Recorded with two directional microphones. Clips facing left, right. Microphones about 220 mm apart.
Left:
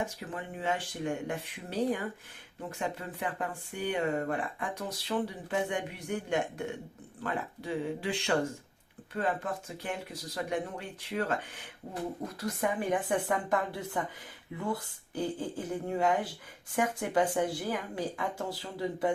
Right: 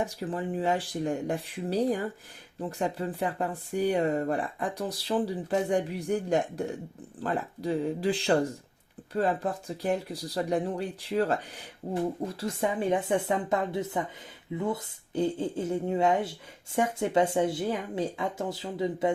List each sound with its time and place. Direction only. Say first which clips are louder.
0.0 s speech: right 6 dB; 35° right (ahead or behind)